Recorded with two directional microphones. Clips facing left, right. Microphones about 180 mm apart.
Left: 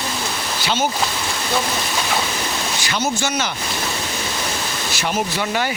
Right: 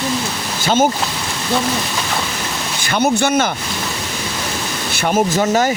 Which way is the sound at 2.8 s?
55° right (ahead or behind).